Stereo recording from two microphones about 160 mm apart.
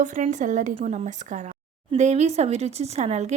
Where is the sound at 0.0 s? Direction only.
50° right (ahead or behind).